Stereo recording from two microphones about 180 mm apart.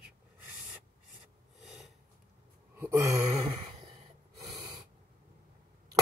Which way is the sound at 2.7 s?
15° right (ahead or behind).